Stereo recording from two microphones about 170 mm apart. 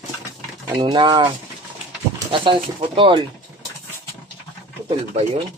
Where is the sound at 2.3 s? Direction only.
30° right (ahead or behind).